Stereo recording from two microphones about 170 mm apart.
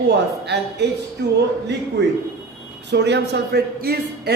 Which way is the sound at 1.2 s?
75° right (ahead or behind).